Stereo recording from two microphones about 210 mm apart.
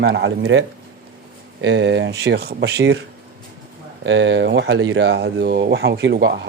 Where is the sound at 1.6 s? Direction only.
60° right (ahead or behind).